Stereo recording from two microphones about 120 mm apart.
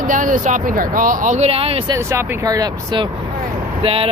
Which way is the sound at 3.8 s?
50° right (ahead or behind).